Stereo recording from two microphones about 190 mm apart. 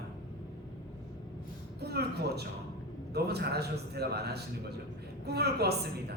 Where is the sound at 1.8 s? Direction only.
60° right (ahead or behind).